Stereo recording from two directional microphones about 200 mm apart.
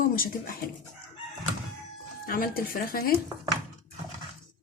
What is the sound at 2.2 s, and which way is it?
Speech, 45° left (ahead or behind).